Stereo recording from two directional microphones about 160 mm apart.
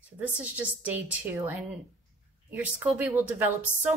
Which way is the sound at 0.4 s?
10° right (ahead or behind).